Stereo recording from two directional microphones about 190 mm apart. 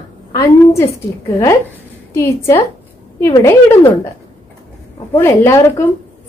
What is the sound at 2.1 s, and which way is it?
A woman's voice, 15° left (ahead or behind).